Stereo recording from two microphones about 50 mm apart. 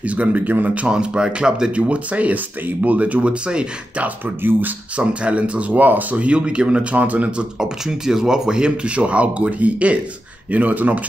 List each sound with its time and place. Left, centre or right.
0.0 s speech: right
0.8 s speech: centre
1.8 s speech: right
4.4 s speech: right
4.9 s speech: right
7.6 s speech: centre; by 11.0 s right